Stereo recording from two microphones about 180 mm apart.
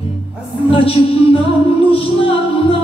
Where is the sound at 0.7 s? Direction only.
30° left (ahead or behind).